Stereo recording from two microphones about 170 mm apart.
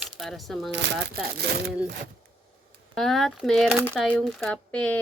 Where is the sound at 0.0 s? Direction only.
Centre (ahead or behind).